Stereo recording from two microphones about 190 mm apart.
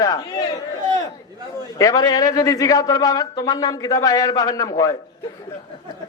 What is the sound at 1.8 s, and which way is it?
A man's voice, 20° left (ahead or behind).